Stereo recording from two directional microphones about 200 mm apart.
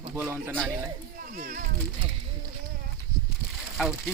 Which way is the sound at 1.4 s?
45° right (ahead or behind).